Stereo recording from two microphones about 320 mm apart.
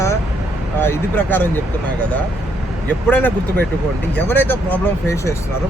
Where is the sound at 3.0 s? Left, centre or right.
Centre.